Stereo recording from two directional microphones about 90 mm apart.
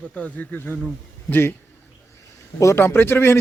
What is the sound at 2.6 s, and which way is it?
Speech, 35° left (ahead or behind).